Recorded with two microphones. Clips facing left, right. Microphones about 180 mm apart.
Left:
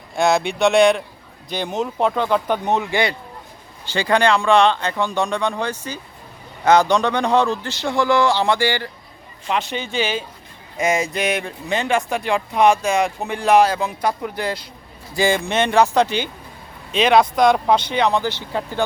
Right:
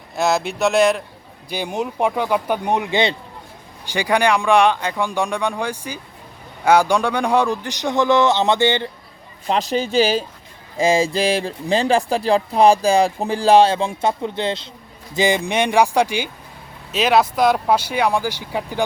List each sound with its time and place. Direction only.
0.2 s a man's voice: centre (ahead or behind); by 8.9 s 20° right (ahead or behind)
9.5 s a man's voice: 35° right (ahead or behind); by 18.9 s 10° right (ahead or behind)